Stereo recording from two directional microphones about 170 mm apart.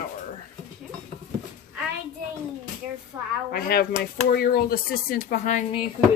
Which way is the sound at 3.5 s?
65° left (ahead or behind).